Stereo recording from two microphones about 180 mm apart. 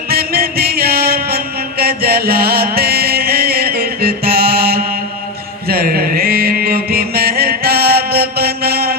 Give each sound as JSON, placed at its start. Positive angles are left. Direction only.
{"t": 0.1, "sound": "music", "side_deg": -60}
{"t": 5.6, "sound": "mantra", "side_deg": -55}